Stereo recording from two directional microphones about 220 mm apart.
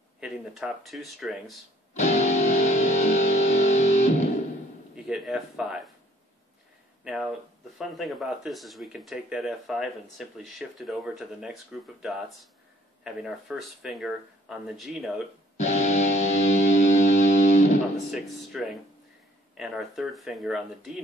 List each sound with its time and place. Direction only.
0.2 s speech: centre (ahead or behind)
2.0 s music: 30° left (ahead or behind)
4.9 s speech: centre (ahead or behind)
7.1 s speech: centre (ahead or behind)
13.0 s speech: centre (ahead or behind)
15.5 s music: 30° left (ahead or behind)
17.9 s speech: centre (ahead or behind)